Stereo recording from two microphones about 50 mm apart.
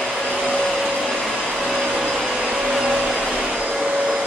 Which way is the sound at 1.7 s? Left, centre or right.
Centre.